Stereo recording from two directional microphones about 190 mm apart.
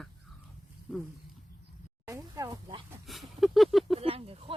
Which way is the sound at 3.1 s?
Centre (ahead or behind).